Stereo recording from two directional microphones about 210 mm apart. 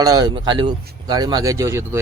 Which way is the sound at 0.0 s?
15° right (ahead or behind).